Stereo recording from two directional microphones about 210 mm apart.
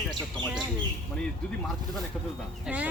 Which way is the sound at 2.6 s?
5° right (ahead or behind).